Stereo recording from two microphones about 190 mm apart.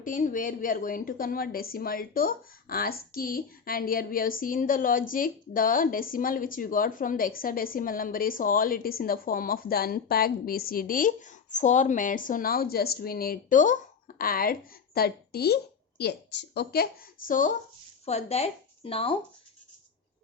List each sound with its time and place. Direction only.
0.0 s a woman's voice: 45° left (ahead or behind)
18.0 s speech: 35° left (ahead or behind)